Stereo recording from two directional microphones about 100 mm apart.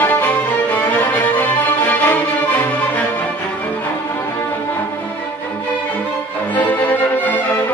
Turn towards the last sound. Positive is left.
turn(degrees=15)  # may be behind; listen again after turning